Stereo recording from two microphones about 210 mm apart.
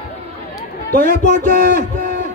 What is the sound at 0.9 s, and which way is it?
Speech, 45° right (ahead or behind).